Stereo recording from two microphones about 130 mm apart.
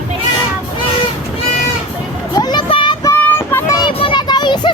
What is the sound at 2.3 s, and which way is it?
Music, 30° left (ahead or behind).